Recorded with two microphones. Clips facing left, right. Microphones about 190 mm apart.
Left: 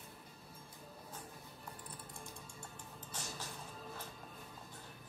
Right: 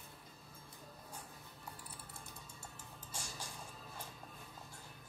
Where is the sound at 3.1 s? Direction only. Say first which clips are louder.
Left 1 dB; 10° right (ahead or behind).